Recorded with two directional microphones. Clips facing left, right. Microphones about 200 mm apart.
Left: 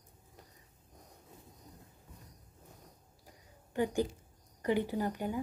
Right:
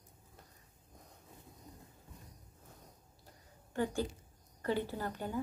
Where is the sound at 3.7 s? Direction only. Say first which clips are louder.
Left 3 dB; 15° left (ahead or behind).